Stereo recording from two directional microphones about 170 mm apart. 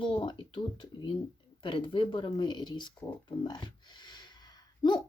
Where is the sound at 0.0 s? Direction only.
30° left (ahead or behind).